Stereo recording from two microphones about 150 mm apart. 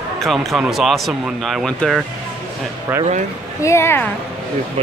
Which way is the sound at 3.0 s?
50° right (ahead or behind).